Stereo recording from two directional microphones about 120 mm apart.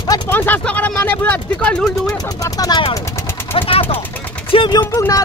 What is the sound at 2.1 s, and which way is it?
Speech, 30° left (ahead or behind).